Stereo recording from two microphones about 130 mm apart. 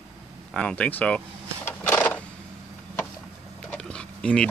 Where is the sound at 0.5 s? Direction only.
5° left (ahead or behind).